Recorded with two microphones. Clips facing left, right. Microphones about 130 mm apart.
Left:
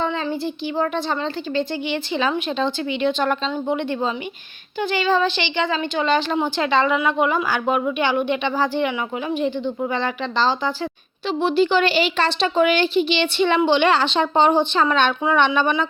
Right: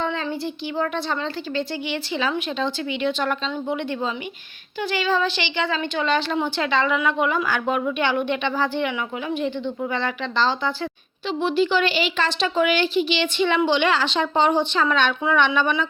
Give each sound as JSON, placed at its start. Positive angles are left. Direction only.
{"t": 0.0, "sound": "a sound", "side_deg": 20}
{"t": 0.8, "sound": "a woman's voice", "side_deg": 25}
{"t": 7.3, "sound": "a woman's voice", "side_deg": 10}
{"t": 9.9, "sound": "a woman's voice", "side_deg": 20}
{"t": 11.3, "sound": "a woman's voice", "side_deg": 35}
{"t": 14.8, "sound": "a woman's voice", "side_deg": 35}